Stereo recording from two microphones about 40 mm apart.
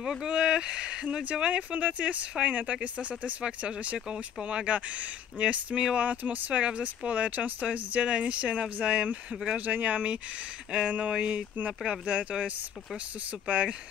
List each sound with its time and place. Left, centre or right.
0.2 s speech: right
1.5 s speech: right
6.6 s speech: right
10.7 s speech: right